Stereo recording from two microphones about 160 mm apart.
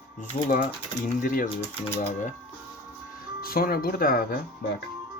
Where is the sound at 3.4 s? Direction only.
70° left (ahead or behind).